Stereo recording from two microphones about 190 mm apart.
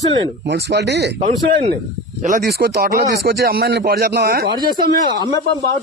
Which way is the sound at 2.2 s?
50° right (ahead or behind).